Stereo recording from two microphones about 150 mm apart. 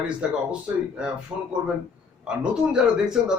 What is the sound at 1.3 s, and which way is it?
Speech, 25° right (ahead or behind).